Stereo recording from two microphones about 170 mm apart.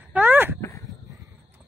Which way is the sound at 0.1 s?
10° right (ahead or behind).